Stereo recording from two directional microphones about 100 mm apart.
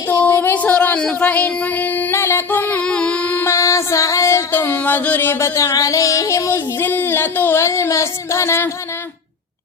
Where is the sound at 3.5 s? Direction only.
30° left (ahead or behind).